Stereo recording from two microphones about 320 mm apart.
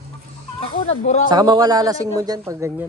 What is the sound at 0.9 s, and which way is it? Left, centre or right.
Speech, left.